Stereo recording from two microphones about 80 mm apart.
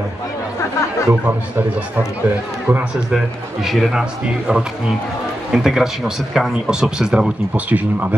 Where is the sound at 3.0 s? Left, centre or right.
Centre.